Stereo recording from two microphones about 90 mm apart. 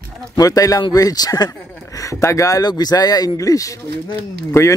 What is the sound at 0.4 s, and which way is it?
Speech, 40° left (ahead or behind).